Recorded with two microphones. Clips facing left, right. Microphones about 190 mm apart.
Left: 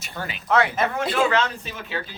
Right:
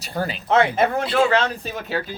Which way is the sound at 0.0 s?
35° right (ahead or behind).